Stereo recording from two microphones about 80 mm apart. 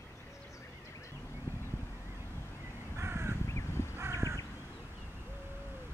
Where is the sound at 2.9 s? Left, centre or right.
Right.